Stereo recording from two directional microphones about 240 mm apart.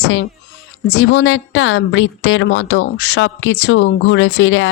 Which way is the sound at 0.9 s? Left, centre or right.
Left.